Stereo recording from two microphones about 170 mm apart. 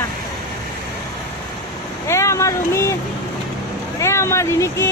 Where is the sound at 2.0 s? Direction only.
15° left (ahead or behind).